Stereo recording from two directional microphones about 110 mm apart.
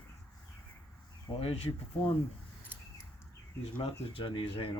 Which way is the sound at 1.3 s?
60° left (ahead or behind).